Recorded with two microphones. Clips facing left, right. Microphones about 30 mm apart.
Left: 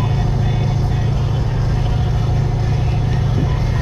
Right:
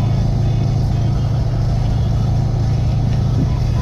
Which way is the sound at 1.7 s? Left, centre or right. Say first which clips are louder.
Even; left.